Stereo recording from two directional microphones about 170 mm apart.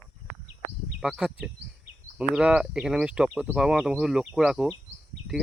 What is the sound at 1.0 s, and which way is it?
Speech, 5° right (ahead or behind).